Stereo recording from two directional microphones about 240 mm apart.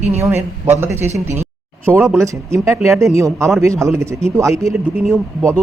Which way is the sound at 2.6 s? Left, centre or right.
Centre.